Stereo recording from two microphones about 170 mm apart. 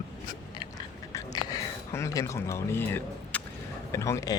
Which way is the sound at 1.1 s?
20° left (ahead or behind).